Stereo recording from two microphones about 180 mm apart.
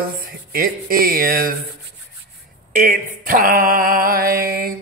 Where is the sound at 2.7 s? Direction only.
50° right (ahead or behind).